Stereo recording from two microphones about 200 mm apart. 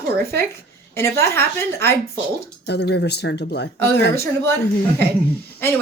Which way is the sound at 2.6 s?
55° left (ahead or behind).